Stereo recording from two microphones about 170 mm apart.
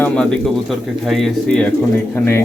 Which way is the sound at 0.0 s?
5° left (ahead or behind).